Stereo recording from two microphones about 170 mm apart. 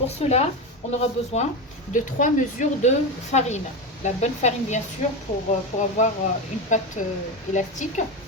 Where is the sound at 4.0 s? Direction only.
45° left (ahead or behind).